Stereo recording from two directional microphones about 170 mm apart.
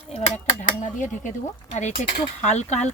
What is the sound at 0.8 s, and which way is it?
Speech, 45° left (ahead or behind).